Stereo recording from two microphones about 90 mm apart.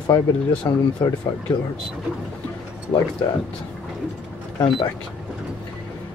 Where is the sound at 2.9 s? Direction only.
45° left (ahead or behind).